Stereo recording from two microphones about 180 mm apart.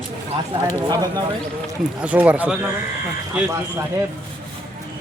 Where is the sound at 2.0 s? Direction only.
5° right (ahead or behind).